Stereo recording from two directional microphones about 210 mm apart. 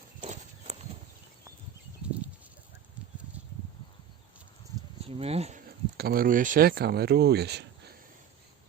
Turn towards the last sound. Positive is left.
turn(degrees=-50)  # may be behind; listen again after turning